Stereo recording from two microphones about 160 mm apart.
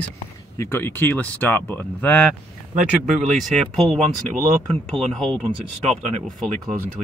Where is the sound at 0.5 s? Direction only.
15° left (ahead or behind).